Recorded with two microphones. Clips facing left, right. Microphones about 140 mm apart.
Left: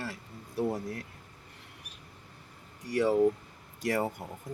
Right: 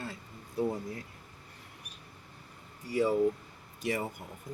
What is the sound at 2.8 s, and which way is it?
Speech, 75° left (ahead or behind).